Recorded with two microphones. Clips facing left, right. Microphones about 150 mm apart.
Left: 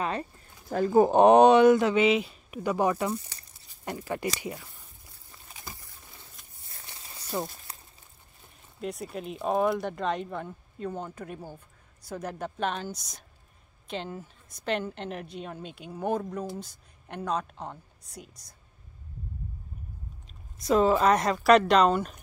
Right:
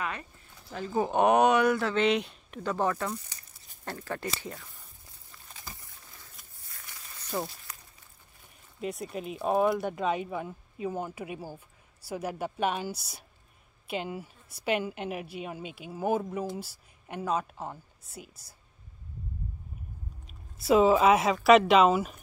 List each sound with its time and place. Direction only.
0.0 s speech: 35° left (ahead or behind)
0.7 s speech: 50° left (ahead or behind)
1.1 s speech: 30° left (ahead or behind)
2.0 s speech: 5° left (ahead or behind)
6.7 s a sound: 30° left (ahead or behind)
7.2 s a sound: 5° left (ahead or behind)
7.7 s a sound: 30° left (ahead or behind)
8.8 s a woman's voice: centre (ahead or behind)
20.2 s speech: 5° right (ahead or behind)